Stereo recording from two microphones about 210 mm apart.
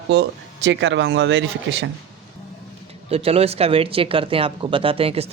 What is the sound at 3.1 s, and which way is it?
Speech, 30° right (ahead or behind).